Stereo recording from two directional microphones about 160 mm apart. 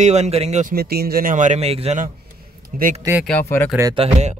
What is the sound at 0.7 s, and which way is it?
Speech, 75° right (ahead or behind).